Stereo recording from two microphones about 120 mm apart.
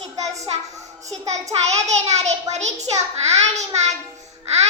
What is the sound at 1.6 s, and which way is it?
A child's voice, 65° right (ahead or behind).